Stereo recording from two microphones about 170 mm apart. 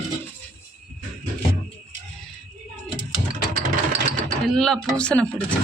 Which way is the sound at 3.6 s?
45° right (ahead or behind).